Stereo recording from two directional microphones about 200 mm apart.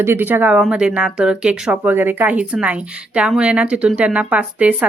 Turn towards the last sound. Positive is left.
turn(degrees=-5)  # may be behind; listen again after turning